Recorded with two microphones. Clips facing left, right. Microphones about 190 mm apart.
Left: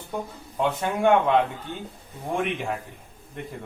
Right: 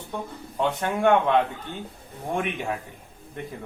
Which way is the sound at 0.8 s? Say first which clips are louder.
Even; centre (ahead or behind).